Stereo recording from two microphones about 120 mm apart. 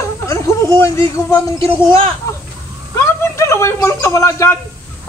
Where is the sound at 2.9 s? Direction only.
20° left (ahead or behind).